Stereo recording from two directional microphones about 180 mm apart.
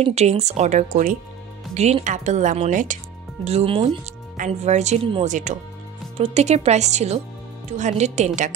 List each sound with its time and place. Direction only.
0.0 s speech: 35° right (ahead or behind)